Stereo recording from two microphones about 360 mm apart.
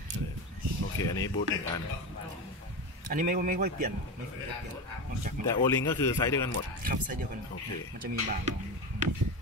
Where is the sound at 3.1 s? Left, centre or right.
Right.